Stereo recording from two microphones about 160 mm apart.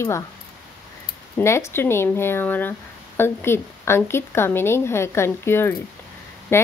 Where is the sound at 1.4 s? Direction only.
15° left (ahead or behind).